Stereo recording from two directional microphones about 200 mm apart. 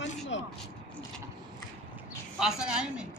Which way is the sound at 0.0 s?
65° left (ahead or behind).